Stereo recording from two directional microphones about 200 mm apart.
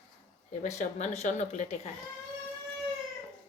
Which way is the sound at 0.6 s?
35° left (ahead or behind).